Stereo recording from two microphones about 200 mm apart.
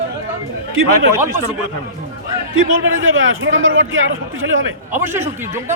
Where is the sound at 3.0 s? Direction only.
80° right.